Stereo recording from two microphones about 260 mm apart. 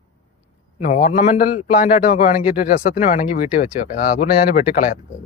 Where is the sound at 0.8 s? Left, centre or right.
Left.